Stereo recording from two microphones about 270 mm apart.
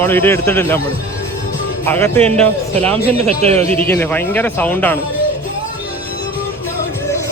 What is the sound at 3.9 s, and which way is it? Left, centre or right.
Speech, centre.